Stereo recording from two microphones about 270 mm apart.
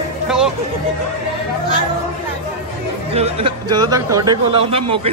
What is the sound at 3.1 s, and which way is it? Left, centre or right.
A man's voice, right.